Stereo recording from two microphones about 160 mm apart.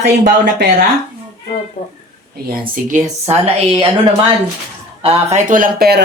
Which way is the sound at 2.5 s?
55° right (ahead or behind).